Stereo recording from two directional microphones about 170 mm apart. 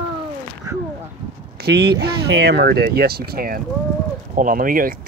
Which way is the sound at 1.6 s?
70° right (ahead or behind).